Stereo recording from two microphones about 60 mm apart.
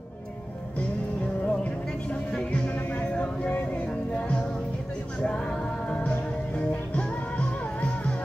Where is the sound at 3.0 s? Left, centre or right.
Left.